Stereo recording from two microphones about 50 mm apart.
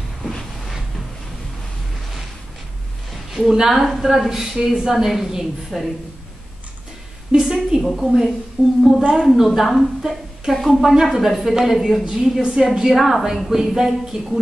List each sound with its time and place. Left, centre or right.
3.1 s a sound: centre
3.5 s a woman's voice: centre
4.9 s a woman's voice: centre
7.3 s a woman's voice: centre
7.8 s a woman's voice: centre
8.6 s a woman's voice: centre
9.1 s a woman's voice: centre